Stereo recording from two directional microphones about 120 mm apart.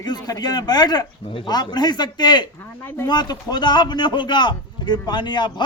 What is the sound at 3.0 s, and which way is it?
A man's voice, 35° left (ahead or behind).